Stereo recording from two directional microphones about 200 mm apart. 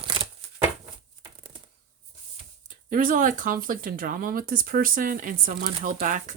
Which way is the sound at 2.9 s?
45° right (ahead or behind).